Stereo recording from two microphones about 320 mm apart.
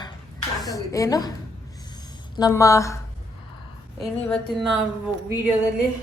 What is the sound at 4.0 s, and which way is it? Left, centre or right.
Speech, centre.